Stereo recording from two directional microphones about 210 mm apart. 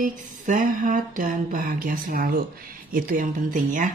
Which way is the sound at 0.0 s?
40° right (ahead or behind).